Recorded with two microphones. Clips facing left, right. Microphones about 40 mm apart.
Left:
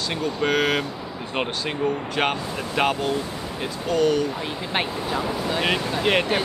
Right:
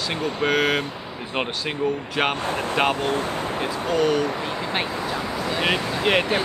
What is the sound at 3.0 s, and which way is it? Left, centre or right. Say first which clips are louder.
Speech: right 2 dB; right.